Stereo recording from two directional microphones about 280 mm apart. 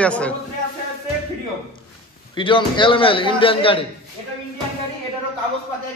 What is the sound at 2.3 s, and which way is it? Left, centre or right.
A man's voice, centre.